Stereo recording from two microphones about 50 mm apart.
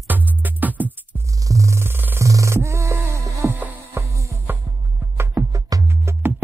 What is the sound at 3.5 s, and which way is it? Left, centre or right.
Music, right.